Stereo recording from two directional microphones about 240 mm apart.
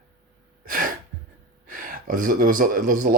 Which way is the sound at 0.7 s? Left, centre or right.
Right.